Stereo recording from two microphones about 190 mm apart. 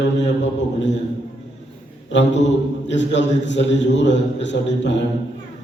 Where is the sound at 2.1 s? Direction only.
70° left (ahead or behind).